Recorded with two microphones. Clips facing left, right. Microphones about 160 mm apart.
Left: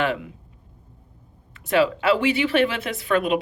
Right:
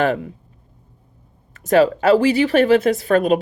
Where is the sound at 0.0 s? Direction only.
40° right (ahead or behind).